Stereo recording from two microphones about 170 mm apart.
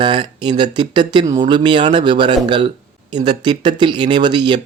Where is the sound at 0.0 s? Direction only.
30° right (ahead or behind).